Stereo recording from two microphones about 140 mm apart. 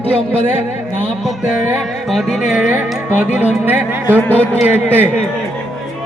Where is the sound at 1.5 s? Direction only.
5° right (ahead or behind).